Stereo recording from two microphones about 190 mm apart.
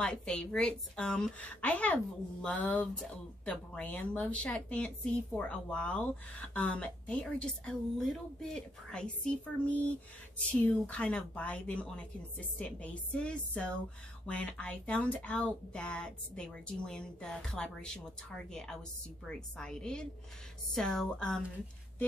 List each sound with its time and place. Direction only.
0.0 s a woman's voice: 5° left (ahead or behind)
10.5 s a woman's voice: 5° left (ahead or behind)